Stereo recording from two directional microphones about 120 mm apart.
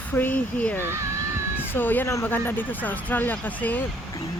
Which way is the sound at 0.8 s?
20° right (ahead or behind).